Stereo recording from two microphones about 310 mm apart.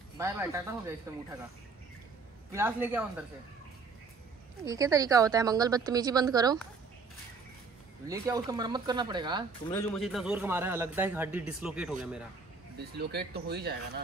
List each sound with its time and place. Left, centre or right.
0.2 s a woman's voice: centre
2.5 s a woman's voice: centre
4.6 s a woman's voice: centre
8.1 s a woman's voice: centre
9.7 s a man's voice: centre
12.7 s speech: right